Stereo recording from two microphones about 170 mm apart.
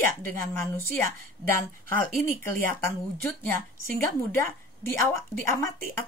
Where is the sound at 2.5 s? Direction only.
10° left (ahead or behind).